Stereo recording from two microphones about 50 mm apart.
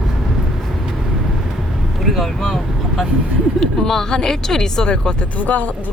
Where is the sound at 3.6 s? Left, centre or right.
Centre.